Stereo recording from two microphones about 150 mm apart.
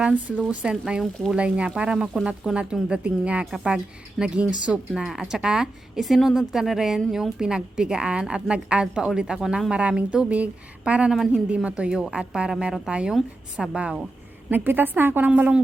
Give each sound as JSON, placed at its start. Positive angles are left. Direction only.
{"t": 0.4, "sound": "a woman's voice", "side_deg": -5}